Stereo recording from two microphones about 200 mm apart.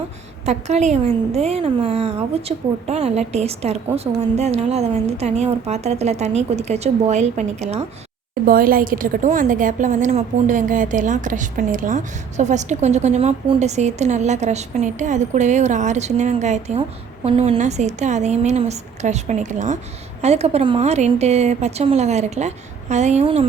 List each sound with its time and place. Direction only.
0.4 s a woman's voice: 35° right (ahead or behind)
8.4 s a woman's voice: 45° right (ahead or behind); by 23.5 s 30° right (ahead or behind)